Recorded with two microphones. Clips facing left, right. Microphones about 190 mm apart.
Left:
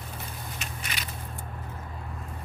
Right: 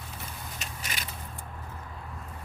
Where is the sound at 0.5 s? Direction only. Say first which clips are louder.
Even; 40° right (ahead or behind).